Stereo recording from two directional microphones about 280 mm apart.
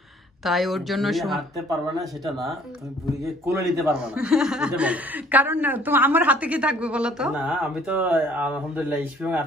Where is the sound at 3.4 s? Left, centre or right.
Centre.